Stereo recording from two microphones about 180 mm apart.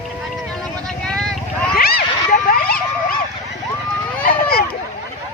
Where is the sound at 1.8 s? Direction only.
55° left (ahead or behind).